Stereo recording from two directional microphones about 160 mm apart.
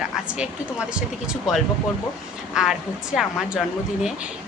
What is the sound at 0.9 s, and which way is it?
A woman's voice, 5° right (ahead or behind).